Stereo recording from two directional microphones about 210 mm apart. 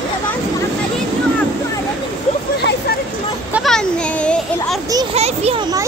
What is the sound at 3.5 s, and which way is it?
Speech, centre (ahead or behind).